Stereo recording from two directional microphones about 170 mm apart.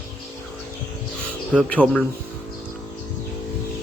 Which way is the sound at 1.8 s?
10° right (ahead or behind).